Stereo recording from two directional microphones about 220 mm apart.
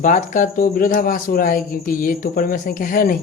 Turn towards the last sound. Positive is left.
turn(degrees=40)  # may be behind; listen again after turning